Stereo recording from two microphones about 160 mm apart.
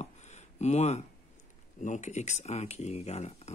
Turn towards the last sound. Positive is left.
turn(degrees=40)  # may be behind; listen again after turning